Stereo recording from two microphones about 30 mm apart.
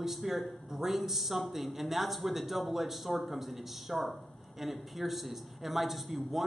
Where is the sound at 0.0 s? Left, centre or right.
Centre.